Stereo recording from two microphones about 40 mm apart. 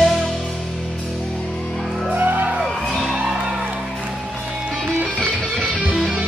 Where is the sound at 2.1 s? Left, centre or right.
Right.